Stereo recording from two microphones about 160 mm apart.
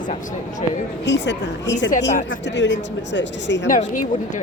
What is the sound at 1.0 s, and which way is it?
Speech, 90° left.